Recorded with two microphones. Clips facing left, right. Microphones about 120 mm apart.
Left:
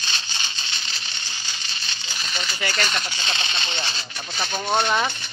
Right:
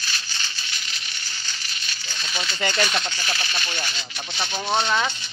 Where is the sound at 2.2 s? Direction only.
5° right (ahead or behind).